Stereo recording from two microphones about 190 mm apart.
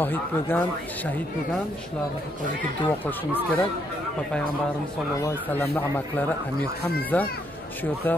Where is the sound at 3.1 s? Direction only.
10° left (ahead or behind).